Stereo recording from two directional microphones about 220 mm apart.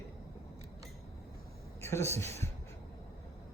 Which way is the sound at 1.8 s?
10° left (ahead or behind).